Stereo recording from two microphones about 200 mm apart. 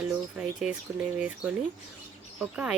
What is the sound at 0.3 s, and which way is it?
Speech, 5° right (ahead or behind).